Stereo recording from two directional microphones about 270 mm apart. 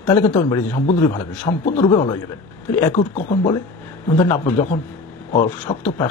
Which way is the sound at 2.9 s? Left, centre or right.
Left.